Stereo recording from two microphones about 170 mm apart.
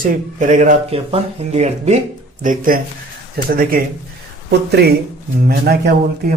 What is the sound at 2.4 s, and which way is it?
A man's voice, 50° right (ahead or behind).